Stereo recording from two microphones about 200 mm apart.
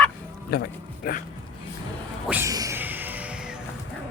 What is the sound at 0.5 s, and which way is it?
Speech, 50° left (ahead or behind).